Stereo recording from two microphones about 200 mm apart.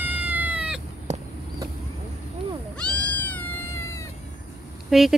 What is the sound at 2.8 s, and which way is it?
Cat, 5° left (ahead or behind).